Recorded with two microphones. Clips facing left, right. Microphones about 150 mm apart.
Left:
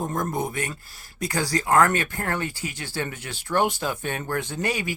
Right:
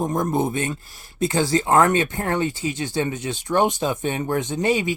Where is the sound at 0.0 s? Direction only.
20° right (ahead or behind).